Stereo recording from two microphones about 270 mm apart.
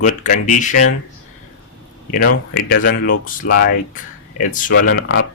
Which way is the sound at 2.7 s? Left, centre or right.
Left.